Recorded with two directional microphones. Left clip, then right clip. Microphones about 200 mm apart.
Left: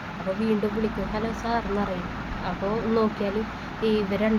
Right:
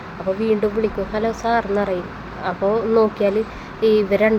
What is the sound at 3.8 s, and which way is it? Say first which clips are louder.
Speech: right 9 dB; 25° right (ahead or behind).